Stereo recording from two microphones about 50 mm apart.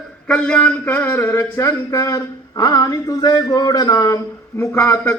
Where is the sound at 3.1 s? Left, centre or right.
Left.